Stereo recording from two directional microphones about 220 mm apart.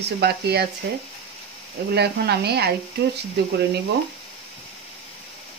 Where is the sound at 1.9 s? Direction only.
50° right (ahead or behind).